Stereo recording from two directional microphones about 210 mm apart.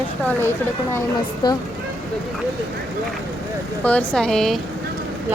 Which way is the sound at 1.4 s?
20° left (ahead or behind).